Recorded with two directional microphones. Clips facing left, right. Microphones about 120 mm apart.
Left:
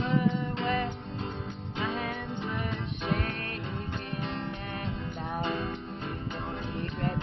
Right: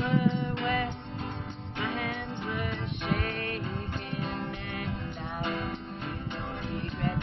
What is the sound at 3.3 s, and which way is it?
Music, 35° left (ahead or behind).